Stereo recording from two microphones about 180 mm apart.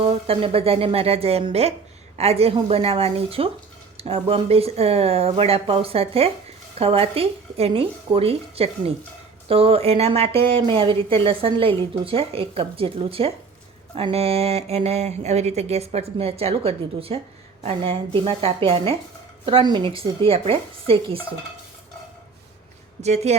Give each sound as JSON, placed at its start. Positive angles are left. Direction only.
{"t": 0.0, "sound": "speech", "side_deg": -35}
{"t": 23.0, "sound": "speech", "side_deg": -40}